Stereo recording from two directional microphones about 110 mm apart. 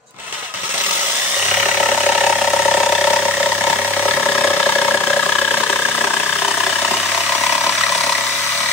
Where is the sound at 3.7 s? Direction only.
15° left (ahead or behind).